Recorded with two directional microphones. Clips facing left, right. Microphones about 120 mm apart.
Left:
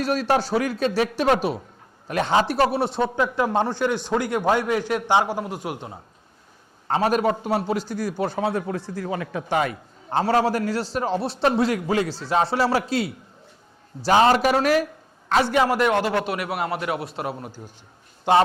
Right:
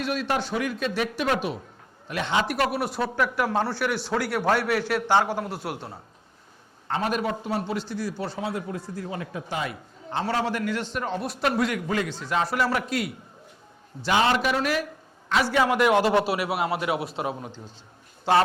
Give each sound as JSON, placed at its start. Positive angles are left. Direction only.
{"t": 0.0, "sound": "a man's voice", "side_deg": 40}
{"t": 6.8, "sound": "a man's voice", "side_deg": 40}
{"t": 15.4, "sound": "a man's voice", "side_deg": 15}
{"t": 15.8, "sound": "a man's voice", "side_deg": -10}
{"t": 16.2, "sound": "a man's voice", "side_deg": -25}
{"t": 17.3, "sound": "a man's voice", "side_deg": 5}
{"t": 18.3, "sound": "a man's voice", "side_deg": 15}